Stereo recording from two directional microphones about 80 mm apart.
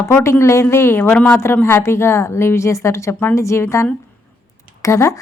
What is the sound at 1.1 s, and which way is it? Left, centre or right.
Speech, left.